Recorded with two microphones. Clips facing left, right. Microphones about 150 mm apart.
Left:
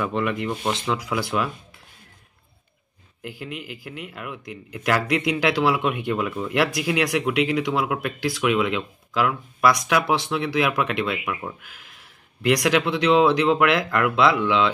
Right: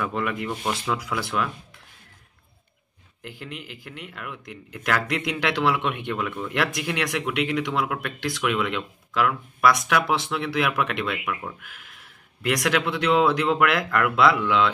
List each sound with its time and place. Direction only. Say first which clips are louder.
0.0 s speech: left 3 dB; centre (ahead or behind)
3.2 s speech: left 4 dB; 5° left (ahead or behind)